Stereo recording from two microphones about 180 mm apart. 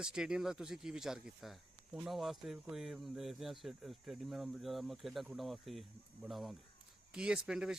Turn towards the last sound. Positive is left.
turn(degrees=-5)  # may be behind; listen again after turning